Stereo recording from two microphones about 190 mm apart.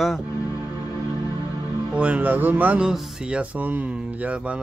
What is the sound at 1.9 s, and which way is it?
Speech, 5° right (ahead or behind).